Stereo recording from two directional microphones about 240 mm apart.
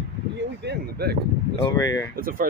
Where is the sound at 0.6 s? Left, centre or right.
Right.